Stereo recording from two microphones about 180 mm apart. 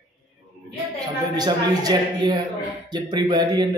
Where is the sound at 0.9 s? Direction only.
20° right (ahead or behind).